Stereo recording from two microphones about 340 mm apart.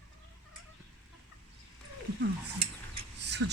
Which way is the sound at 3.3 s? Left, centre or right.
Right.